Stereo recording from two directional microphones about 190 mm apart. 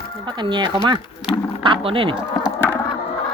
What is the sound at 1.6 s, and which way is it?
Speech, 25° right (ahead or behind).